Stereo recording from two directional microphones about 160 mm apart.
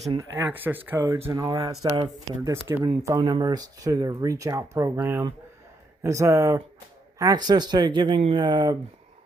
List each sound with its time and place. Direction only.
0.2 s speech: 10° right (ahead or behind)
0.9 s speech: 25° right (ahead or behind)